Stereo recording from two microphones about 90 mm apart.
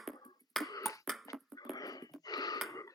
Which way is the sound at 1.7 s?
45° left (ahead or behind).